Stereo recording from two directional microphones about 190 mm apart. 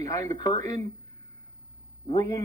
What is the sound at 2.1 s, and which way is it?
Speech, 20° left (ahead or behind).